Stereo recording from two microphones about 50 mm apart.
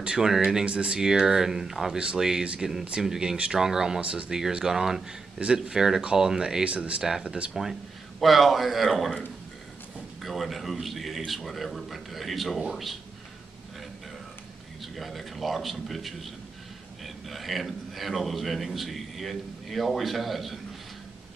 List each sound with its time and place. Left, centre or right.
0.0 s speech: centre
0.7 s speech: right
4.0 s speech: right
4.3 s speech: centre
6.6 s speech: right
7.0 s speech: centre
7.2 s speech: right
8.2 s a man's voice: centre
10.2 s a man's voice: centre
14.8 s a man's voice: centre